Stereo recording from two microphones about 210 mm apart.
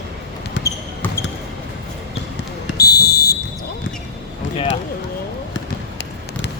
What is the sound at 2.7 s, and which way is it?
Fire alarm, 50° left (ahead or behind).